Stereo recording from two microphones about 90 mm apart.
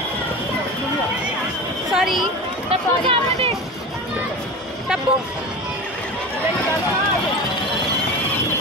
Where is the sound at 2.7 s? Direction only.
90° right.